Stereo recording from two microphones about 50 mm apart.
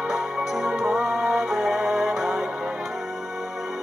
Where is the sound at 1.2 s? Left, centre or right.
Centre.